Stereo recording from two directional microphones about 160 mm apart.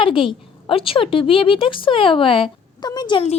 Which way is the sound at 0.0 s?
35° left (ahead or behind).